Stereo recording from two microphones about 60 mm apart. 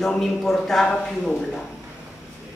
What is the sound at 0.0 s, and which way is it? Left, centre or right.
Speech, centre.